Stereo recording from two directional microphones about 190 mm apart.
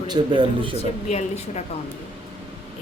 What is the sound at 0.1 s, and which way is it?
Speech, 25° right (ahead or behind).